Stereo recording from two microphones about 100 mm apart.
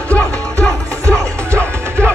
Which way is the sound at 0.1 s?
15° left (ahead or behind).